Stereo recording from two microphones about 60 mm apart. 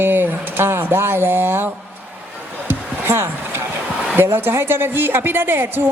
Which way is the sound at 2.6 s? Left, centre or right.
Right.